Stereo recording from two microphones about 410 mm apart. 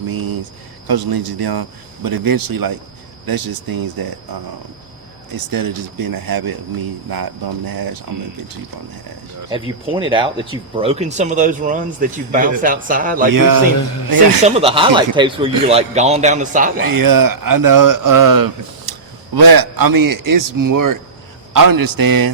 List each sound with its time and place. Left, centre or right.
0.1 s a sound: right
0.9 s speech: right
5.5 s a man's voice: right
9.5 s a man's voice: centre
13.3 s a man's voice: right
14.4 s a man's voice: centre
16.8 s a man's voice: right